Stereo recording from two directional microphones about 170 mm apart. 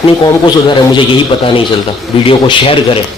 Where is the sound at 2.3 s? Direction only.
30° left (ahead or behind).